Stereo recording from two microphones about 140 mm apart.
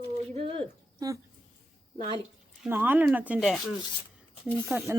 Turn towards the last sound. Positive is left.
turn(degrees=-15)  # may be behind; listen again after turning